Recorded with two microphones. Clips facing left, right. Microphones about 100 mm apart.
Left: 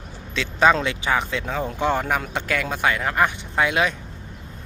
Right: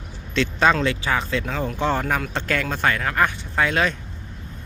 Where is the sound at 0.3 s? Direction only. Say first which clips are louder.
Left 1 dB; 10° left (ahead or behind).